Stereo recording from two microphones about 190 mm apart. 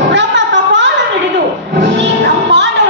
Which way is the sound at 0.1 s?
70° right (ahead or behind).